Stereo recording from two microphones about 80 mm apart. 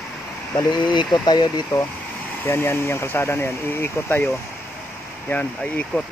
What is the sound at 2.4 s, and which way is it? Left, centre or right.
Speech, left.